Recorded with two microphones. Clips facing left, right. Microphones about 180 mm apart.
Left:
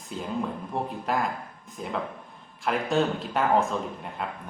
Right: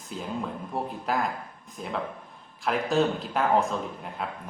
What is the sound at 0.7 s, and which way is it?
Speech, centre (ahead or behind).